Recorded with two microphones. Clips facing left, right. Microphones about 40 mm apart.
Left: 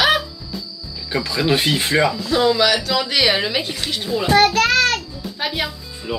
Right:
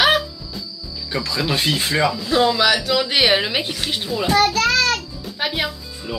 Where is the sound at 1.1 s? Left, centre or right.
Centre.